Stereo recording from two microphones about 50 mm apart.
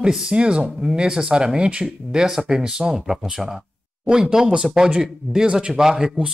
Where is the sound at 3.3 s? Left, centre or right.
Centre.